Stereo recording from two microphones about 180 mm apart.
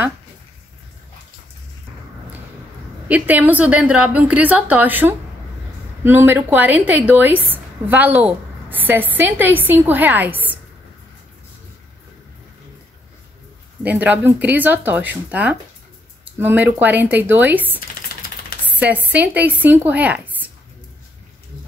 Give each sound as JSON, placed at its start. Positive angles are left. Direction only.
{"t": 3.1, "sound": "a woman's voice", "side_deg": -10}
{"t": 13.8, "sound": "a woman's voice", "side_deg": -10}
{"t": 17.7, "sound": "typewriter", "side_deg": 55}
{"t": 18.7, "sound": "speech", "side_deg": -10}